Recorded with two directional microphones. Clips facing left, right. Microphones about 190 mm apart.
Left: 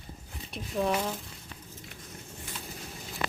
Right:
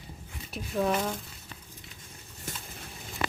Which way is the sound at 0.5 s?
Centre (ahead or behind).